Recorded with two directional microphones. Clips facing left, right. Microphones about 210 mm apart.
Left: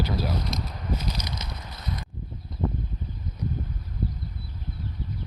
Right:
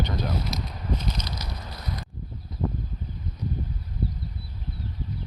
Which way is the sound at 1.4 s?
20° left (ahead or behind).